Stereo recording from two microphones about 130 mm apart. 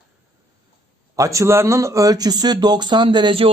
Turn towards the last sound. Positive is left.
turn(degrees=-40)  # may be behind; listen again after turning